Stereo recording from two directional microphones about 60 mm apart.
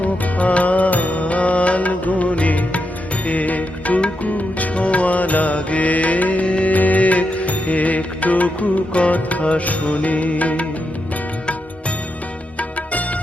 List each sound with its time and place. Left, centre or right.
0.0 s music: left
12.5 s music: left